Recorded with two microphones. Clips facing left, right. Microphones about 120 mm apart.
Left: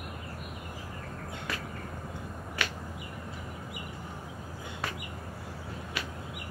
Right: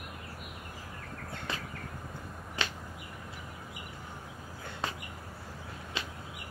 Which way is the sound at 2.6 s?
25° right (ahead or behind).